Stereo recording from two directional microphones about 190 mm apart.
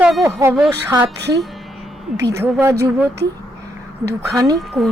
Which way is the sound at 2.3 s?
15° right (ahead or behind).